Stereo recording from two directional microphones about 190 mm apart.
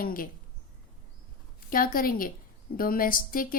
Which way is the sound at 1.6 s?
50° left (ahead or behind).